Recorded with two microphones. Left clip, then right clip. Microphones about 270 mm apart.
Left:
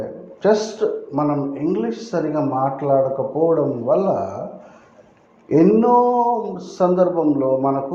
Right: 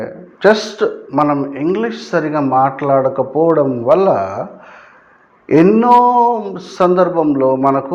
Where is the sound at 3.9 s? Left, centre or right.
Right.